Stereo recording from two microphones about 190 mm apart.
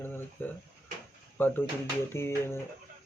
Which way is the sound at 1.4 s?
10° left (ahead or behind).